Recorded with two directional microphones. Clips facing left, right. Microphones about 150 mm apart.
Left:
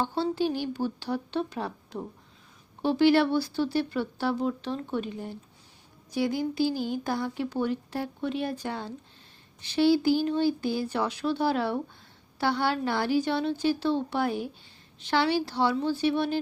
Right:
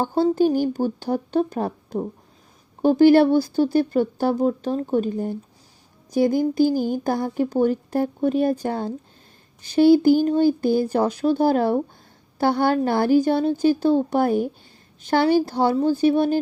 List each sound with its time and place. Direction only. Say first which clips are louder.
0.0 s speech: right 8 dB; 45° right (ahead or behind)